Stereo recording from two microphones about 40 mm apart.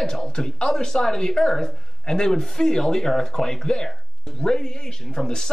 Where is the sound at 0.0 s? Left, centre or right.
Centre.